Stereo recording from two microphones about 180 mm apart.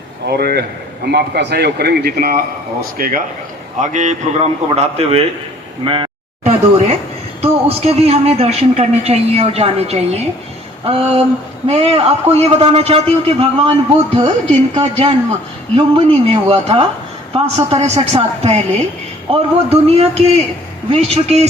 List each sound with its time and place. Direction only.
0.3 s a man's voice: 60° right (ahead or behind); by 5.2 s 35° right (ahead or behind)
5.8 s a sound: 30° right (ahead or behind)
7.4 s speech: 35° right (ahead or behind)
14.8 s speech: 35° right (ahead or behind)